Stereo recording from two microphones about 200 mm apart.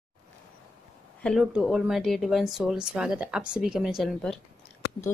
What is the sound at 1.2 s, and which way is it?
Speech, centre (ahead or behind).